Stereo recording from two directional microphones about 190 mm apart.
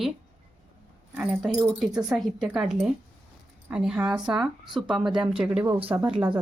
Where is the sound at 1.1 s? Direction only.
5° right (ahead or behind).